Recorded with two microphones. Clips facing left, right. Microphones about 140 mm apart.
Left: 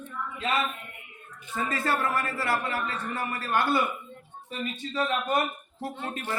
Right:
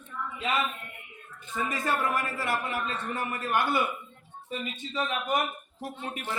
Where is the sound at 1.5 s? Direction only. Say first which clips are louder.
Left 1 dB; 15° right (ahead or behind).